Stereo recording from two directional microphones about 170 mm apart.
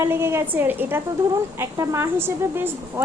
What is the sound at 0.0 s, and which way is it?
Speech, 15° right (ahead or behind).